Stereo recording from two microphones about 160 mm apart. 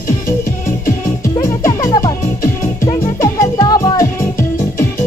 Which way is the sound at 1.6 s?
20° left (ahead or behind).